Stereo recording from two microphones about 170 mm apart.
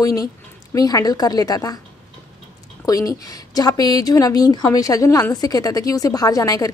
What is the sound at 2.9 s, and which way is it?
A woman's voice, 20° left (ahead or behind).